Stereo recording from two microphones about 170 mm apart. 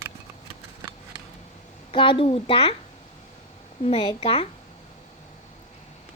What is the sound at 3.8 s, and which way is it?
Speech, 25° left (ahead or behind).